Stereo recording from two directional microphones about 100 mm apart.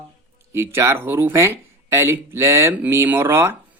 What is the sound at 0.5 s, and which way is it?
Speech, 25° right (ahead or behind).